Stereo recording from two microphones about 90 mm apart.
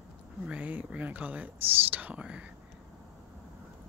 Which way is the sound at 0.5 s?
15° right (ahead or behind).